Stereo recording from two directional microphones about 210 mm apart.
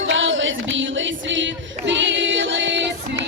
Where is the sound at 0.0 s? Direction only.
65° right (ahead or behind).